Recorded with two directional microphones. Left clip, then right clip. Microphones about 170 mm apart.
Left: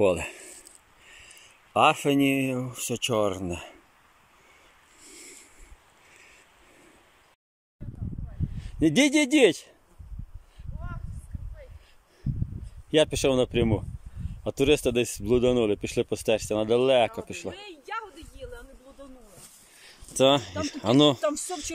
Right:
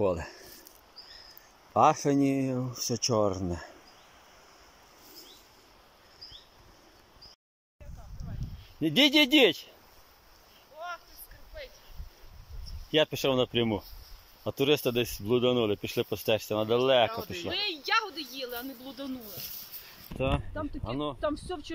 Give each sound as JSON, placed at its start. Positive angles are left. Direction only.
{"t": 0.1, "sound": "speech", "side_deg": 10}
{"t": 1.7, "sound": "speech", "side_deg": 5}
{"t": 8.7, "sound": "speech", "side_deg": 20}
{"t": 12.9, "sound": "speech", "side_deg": 15}
{"t": 17.5, "sound": "a sound", "side_deg": 0}
{"t": 20.2, "sound": "speech", "side_deg": 30}
{"t": 21.2, "sound": "speech", "side_deg": 5}